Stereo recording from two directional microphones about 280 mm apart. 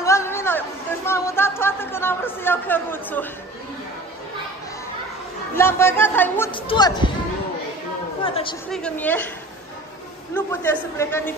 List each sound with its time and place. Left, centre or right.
0.0 s a sound: centre
5.6 s speech: centre
8.2 s a woman's voice: centre
8.7 s a woman's voice: centre
10.3 s speech: centre